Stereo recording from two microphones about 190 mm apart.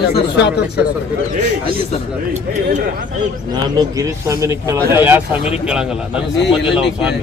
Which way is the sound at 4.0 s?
15° right (ahead or behind).